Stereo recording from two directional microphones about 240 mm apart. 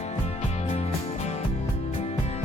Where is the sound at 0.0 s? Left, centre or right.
Left.